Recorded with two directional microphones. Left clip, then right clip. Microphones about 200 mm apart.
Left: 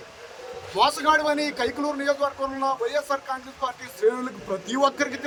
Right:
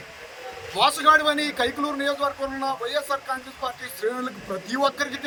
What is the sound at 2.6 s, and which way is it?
Speech, 30° left (ahead or behind).